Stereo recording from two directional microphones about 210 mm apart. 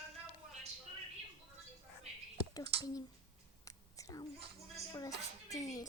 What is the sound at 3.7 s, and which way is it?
Whispering, 15° left (ahead or behind).